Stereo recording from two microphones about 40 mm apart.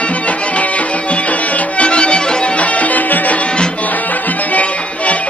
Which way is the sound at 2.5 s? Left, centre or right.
Left.